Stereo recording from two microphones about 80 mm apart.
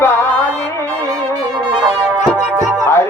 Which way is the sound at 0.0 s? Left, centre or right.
Left.